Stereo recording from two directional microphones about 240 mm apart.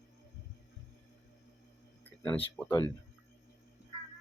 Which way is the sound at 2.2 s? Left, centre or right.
Centre.